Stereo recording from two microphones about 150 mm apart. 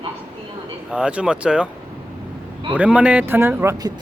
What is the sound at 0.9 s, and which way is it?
Speech, 5° right (ahead or behind).